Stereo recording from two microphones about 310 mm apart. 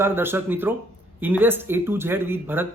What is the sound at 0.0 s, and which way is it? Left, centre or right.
A man's voice, centre.